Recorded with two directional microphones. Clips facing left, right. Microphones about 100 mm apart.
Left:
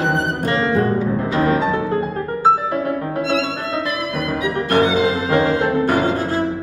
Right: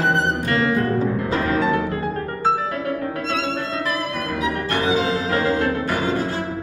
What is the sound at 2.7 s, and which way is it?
Music, 25° left (ahead or behind).